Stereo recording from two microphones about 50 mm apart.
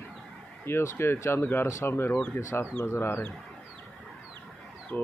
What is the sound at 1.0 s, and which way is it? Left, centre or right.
Speech, left.